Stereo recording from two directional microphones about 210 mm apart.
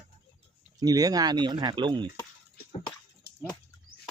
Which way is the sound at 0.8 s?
20° right (ahead or behind).